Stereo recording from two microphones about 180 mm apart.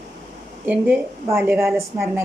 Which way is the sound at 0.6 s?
10° right (ahead or behind).